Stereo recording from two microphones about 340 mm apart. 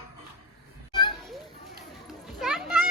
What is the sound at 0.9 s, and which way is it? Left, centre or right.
Children playing, centre.